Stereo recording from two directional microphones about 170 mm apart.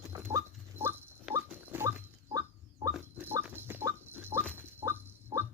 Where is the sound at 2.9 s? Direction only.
10° right (ahead or behind).